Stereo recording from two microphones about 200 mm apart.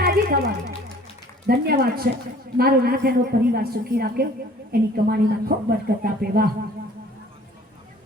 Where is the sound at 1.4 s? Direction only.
50° right (ahead or behind).